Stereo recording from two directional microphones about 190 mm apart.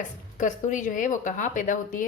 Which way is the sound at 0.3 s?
40° left (ahead or behind).